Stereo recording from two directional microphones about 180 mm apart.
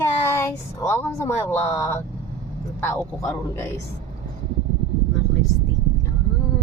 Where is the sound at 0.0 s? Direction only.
15° left (ahead or behind).